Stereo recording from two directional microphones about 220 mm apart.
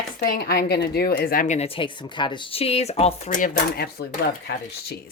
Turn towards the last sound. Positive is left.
turn(degrees=50)  # may be behind; listen again after turning